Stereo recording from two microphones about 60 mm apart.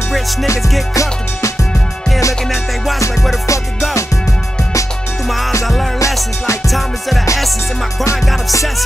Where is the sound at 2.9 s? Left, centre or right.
Left.